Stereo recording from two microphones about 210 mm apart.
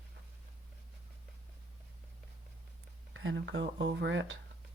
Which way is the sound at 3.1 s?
65° right (ahead or behind).